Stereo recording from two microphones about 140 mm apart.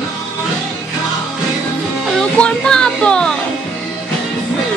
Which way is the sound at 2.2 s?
5° left (ahead or behind).